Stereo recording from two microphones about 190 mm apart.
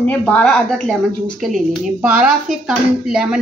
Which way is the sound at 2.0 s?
5° right (ahead or behind).